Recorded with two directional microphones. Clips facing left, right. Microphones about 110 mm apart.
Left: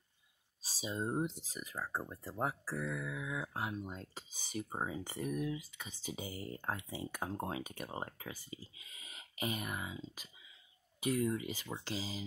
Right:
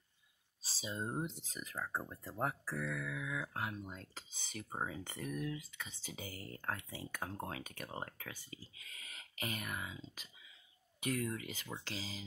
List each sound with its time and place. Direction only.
0.6 s speech: 10° left (ahead or behind)
11.1 s speech: 15° left (ahead or behind)